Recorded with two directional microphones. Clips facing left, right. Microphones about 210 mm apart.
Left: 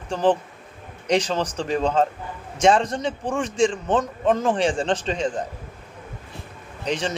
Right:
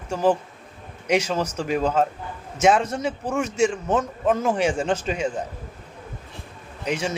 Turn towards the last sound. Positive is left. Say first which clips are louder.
# even
turn(degrees=-10)  # may be behind; listen again after turning